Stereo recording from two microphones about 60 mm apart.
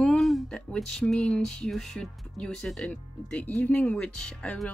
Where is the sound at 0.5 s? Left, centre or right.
Centre.